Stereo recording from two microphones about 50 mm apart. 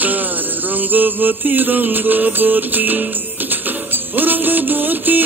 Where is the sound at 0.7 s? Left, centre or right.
Right.